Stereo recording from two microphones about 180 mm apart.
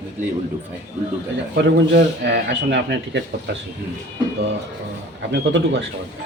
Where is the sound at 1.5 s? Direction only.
70° right (ahead or behind).